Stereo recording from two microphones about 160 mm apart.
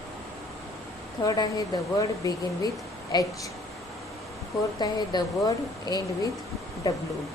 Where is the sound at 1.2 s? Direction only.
25° left (ahead or behind).